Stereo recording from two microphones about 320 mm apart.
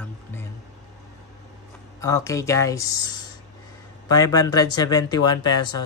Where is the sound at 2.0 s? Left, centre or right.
Centre.